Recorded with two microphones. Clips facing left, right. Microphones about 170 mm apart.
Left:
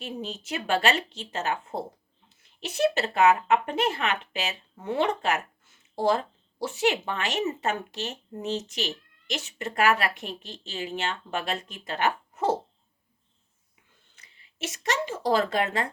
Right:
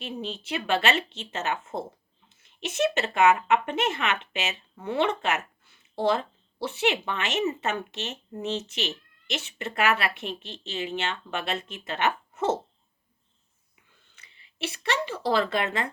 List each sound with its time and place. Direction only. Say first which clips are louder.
0.0 s speech: right 1 dB; 40° left (ahead or behind)
14.2 s speech: right 2 dB; 40° left (ahead or behind)